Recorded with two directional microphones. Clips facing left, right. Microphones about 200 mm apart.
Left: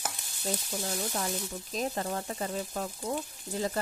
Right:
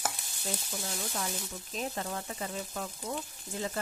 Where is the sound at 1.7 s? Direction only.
40° left (ahead or behind).